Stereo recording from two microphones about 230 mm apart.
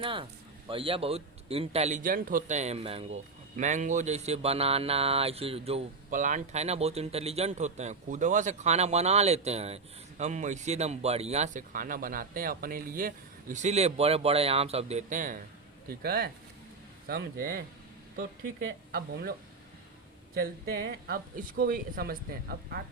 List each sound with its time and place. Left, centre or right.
0.0 s a man's voice: right
18.9 s speech: right
20.3 s speech: right